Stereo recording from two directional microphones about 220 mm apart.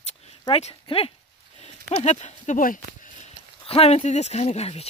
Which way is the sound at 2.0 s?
30° left (ahead or behind).